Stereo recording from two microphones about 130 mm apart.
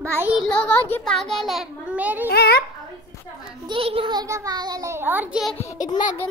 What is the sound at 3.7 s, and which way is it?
A child's voice, 45° right (ahead or behind).